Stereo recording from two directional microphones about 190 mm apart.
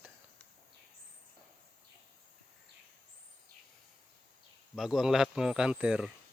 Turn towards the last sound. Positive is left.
turn(degrees=-5)  # may be behind; listen again after turning